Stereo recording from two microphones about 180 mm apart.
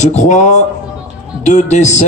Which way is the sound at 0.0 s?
40° left (ahead or behind).